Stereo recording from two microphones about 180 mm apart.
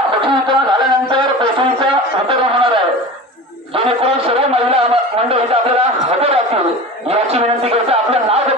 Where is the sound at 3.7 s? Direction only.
30° right (ahead or behind).